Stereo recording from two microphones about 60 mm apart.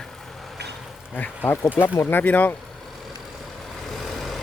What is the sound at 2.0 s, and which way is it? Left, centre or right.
Speech, left.